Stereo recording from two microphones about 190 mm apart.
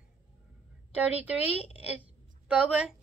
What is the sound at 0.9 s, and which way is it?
A woman's voice, 5° right (ahead or behind).